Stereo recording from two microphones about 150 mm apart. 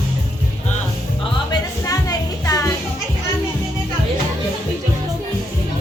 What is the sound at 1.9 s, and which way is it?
Music, 25° left (ahead or behind).